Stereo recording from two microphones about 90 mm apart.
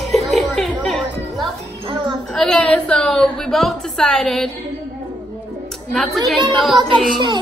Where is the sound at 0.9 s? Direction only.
Centre (ahead or behind).